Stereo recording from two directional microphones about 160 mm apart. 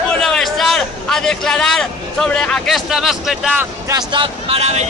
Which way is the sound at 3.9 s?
25° right (ahead or behind).